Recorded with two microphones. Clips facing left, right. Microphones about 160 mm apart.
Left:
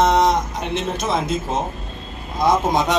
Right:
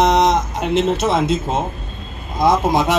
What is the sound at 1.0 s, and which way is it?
Speech, 25° right (ahead or behind).